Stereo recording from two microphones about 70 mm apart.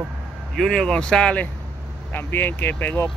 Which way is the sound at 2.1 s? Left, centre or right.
Left.